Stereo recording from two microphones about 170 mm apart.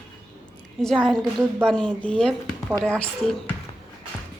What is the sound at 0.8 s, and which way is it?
Speech, centre (ahead or behind).